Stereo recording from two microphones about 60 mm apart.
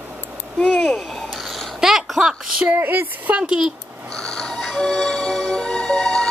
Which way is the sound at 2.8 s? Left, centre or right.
Right.